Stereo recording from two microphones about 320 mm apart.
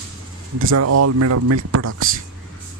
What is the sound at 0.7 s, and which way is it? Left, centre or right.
Speech, right.